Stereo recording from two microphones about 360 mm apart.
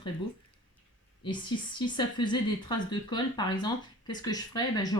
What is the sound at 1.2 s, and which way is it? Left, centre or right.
Speech, centre.